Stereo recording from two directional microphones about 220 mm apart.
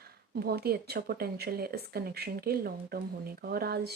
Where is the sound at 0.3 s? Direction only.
45° right (ahead or behind).